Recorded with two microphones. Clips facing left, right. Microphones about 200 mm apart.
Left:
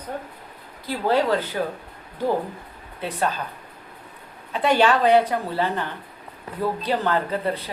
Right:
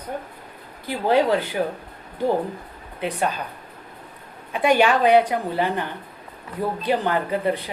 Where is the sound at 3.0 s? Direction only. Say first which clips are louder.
Right 2 dB; 15° right (ahead or behind).